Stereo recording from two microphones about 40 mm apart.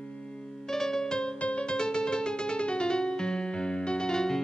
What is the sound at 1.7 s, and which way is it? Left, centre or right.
Music, left.